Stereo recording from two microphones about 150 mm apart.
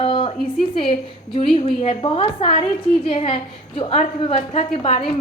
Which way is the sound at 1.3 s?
35° left (ahead or behind).